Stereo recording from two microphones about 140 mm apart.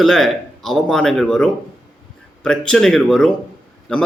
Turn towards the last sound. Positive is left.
turn(degrees=5)  # may be behind; listen again after turning